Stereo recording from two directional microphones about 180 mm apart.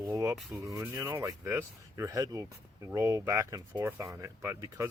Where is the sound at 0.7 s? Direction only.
20° right (ahead or behind).